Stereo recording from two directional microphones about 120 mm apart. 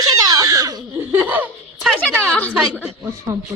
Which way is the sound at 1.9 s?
10° left (ahead or behind).